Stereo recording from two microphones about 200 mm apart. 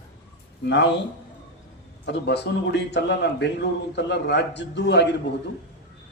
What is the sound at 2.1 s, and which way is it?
A man's voice, 60° left (ahead or behind).